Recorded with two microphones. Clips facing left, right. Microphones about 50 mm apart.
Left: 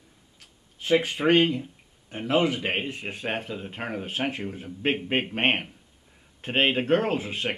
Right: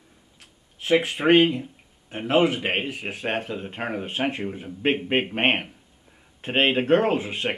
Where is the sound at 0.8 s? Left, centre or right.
Centre.